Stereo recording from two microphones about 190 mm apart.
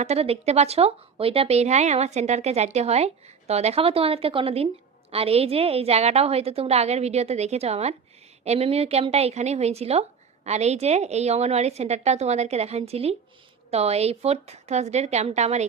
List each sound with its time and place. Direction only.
0.0 s speech: 35° right (ahead or behind)